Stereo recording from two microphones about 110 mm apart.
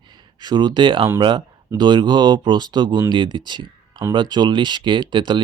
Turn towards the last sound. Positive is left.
turn(degrees=-45)  # may be behind; listen again after turning